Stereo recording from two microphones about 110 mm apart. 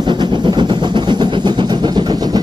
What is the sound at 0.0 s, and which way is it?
Vehicle, 45° right (ahead or behind).